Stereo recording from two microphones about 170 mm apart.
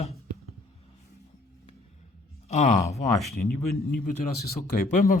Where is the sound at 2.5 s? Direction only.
40° left (ahead or behind).